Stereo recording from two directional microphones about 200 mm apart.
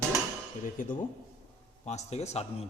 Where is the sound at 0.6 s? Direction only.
40° left (ahead or behind).